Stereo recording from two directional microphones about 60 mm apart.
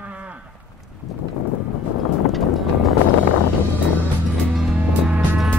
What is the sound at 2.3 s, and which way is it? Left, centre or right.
Music, centre.